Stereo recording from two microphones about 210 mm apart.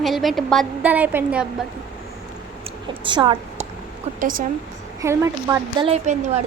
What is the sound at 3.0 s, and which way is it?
Speech, 25° right (ahead or behind).